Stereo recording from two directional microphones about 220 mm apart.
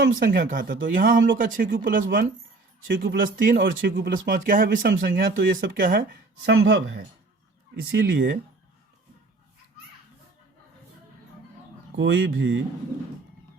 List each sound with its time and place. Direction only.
0.0 s speech: 45° right (ahead or behind)
7.8 s speech: 45° right (ahead or behind)
11.9 s speech: 55° right (ahead or behind)